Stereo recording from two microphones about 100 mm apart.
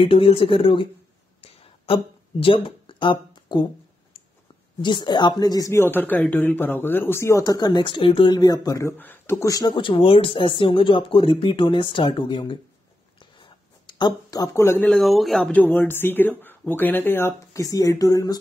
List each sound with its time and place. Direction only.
0.0 s speech: 65° left (ahead or behind)
1.4 s a sound: 75° left (ahead or behind)
2.4 s speech: 60° left (ahead or behind)
4.8 s speech: 50° left (ahead or behind)
5.8 s speech: 20° left (ahead or behind); by 8.4 s 60° left (ahead or behind)
8.4 s speech: 40° left (ahead or behind)
8.9 s speech: 20° left (ahead or behind); by 12.5 s 55° left (ahead or behind)
13.4 s a sound: 50° left (ahead or behind); by 14.9 s 25° left (ahead or behind)
14.9 s speech: centre (ahead or behind)
15.5 s speech: 15° left (ahead or behind)
17.6 s speech: 35° left (ahead or behind)